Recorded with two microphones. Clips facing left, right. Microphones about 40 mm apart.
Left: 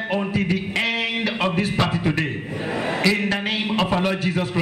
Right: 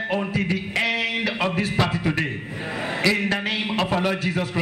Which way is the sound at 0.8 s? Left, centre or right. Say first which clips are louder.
Even; centre.